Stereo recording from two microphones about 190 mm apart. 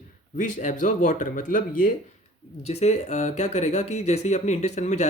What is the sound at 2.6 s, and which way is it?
Speech, 35° left (ahead or behind).